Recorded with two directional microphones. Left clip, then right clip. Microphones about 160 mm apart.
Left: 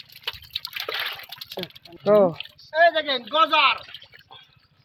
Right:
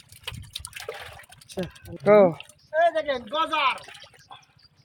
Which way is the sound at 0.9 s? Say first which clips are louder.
Left 8 dB; 5° left (ahead or behind).